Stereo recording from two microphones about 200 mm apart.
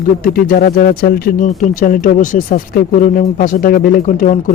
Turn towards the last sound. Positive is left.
turn(degrees=40)  # may be behind; listen again after turning